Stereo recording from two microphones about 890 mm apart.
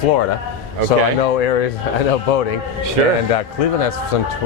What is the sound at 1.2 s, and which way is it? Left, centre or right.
A man's voice, left.